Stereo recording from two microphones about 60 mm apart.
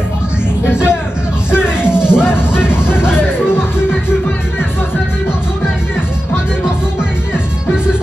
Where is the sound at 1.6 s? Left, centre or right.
Centre.